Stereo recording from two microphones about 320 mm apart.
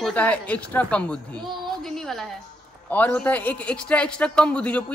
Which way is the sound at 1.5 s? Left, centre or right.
Centre.